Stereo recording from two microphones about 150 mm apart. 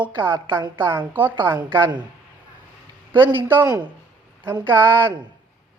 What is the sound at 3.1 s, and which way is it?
Speech, 15° right (ahead or behind).